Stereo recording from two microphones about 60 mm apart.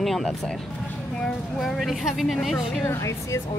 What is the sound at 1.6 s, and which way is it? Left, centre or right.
Speech, centre.